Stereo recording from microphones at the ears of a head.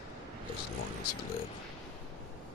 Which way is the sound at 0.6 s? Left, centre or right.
Left.